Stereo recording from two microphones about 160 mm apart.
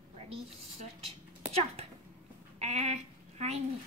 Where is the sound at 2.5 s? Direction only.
45° right (ahead or behind).